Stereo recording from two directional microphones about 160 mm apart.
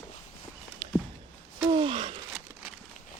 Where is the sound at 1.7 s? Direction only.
35° right (ahead or behind).